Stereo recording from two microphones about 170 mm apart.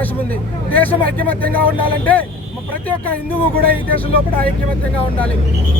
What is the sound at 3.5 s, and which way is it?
Speech, 60° right (ahead or behind).